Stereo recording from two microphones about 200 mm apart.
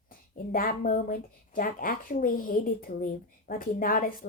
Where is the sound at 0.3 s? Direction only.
45° left (ahead or behind).